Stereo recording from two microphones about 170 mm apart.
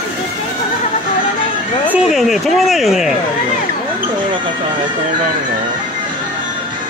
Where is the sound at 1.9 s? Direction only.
Centre (ahead or behind).